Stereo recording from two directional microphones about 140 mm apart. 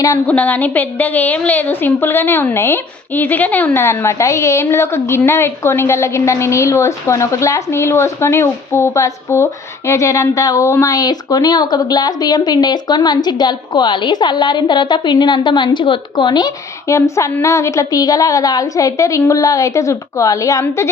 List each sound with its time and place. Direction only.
0.3 s a woman's voice: 10° left (ahead or behind)